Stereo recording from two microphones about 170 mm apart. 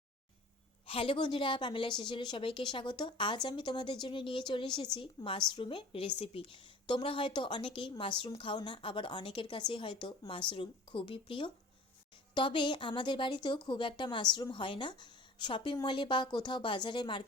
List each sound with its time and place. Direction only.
0.9 s a woman's voice: 30° left (ahead or behind)